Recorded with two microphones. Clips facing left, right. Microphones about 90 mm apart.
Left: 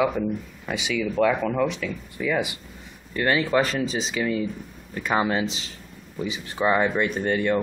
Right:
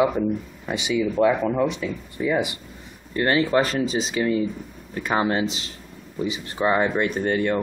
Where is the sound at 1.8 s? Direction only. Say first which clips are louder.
Right 2 dB; 30° right (ahead or behind).